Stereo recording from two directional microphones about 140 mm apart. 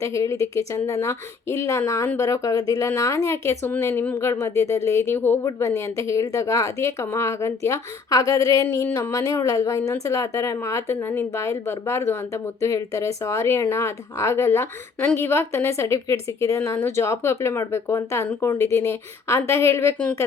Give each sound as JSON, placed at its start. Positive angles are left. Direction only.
{"t": 0.0, "sound": "speech", "side_deg": 20}